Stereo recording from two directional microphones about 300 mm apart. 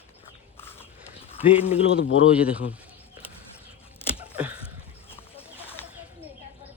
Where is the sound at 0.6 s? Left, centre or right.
Centre.